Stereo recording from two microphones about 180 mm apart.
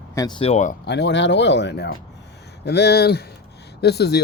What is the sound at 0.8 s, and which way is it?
Speech, 75° left (ahead or behind).